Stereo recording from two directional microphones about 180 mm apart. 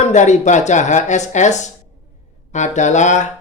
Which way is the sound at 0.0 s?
40° left (ahead or behind).